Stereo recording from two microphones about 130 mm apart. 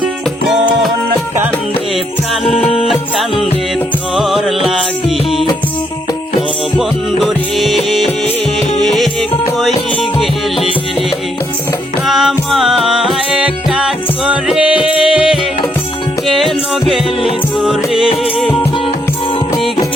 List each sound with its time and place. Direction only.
2.4 s music: centre (ahead or behind)
2.6 s music: 45° left (ahead or behind)
3.2 s music: centre (ahead or behind)
6.7 s music: centre (ahead or behind)
12.0 s music: centre (ahead or behind)